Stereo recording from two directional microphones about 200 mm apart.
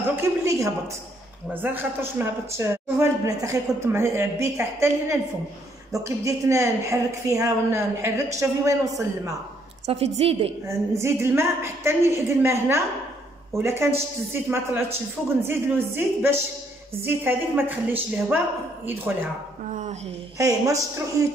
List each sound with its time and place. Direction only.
0.1 s speech: 15° right (ahead or behind)
9.8 s a woman's voice: 30° right (ahead or behind)
10.7 s speech: 15° right (ahead or behind)
19.7 s speech: 40° right (ahead or behind)
20.3 s speech: 15° right (ahead or behind)